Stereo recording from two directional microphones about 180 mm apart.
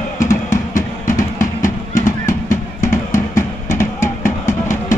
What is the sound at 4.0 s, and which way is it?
Music, 45° left (ahead or behind).